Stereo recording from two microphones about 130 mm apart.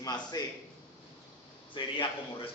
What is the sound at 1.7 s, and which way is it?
Speech, 40° left (ahead or behind).